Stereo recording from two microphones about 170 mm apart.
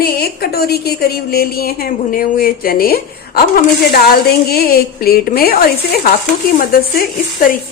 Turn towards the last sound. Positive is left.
turn(degrees=55)  # may be behind; listen again after turning